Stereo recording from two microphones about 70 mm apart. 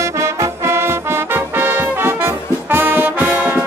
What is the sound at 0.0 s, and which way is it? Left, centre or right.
Music, right.